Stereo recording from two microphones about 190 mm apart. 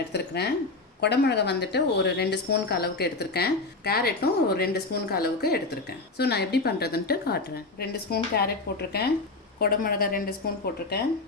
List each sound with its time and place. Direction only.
0.1 s a woman's voice: 60° left (ahead or behind)